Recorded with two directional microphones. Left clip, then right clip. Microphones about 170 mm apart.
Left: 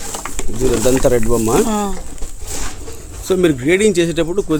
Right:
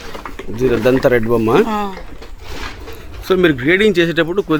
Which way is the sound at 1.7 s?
70° left (ahead or behind).